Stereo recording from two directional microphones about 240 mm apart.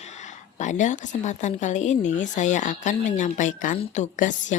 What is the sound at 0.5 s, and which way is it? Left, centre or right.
Speech, left.